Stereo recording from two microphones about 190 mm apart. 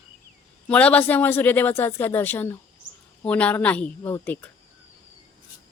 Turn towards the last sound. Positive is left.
turn(degrees=10)  # may be behind; listen again after turning